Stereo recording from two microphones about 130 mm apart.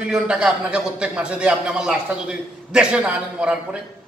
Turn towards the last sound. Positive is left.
turn(degrees=-10)  # may be behind; listen again after turning